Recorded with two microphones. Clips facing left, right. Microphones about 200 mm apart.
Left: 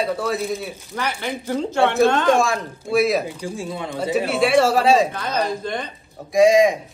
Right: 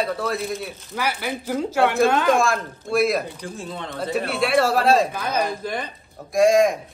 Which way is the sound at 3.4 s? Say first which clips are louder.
Left 4 dB; 10° left (ahead or behind).